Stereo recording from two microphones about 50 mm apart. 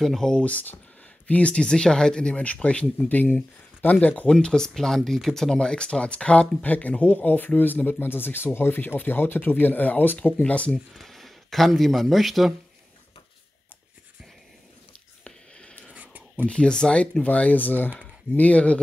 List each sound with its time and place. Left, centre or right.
0.0 s speech: centre
0.4 s speech: left
2.4 s speech: left
4.3 s speech: centre
11.0 s speech: centre
15.2 s a sound: centre
15.9 s a sound: right
16.4 s speech: left
17.2 s speech: left